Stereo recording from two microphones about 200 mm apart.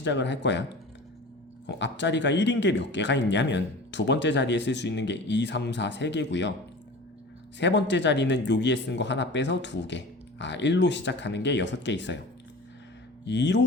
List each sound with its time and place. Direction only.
0.0 s speech: 60° left (ahead or behind)
1.6 s speech: 60° left (ahead or behind)
7.6 s speech: 60° left (ahead or behind)
13.2 s speech: 60° left (ahead or behind)